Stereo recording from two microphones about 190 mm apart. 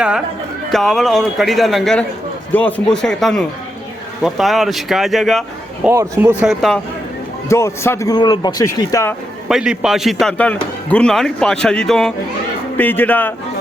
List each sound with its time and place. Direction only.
0.7 s a man's voice: centre (ahead or behind)
5.9 s a man's voice: 15° right (ahead or behind)
6.5 s a man's voice: centre (ahead or behind)
7.4 s speech: 15° left (ahead or behind)
9.5 s a man's voice: 5° right (ahead or behind)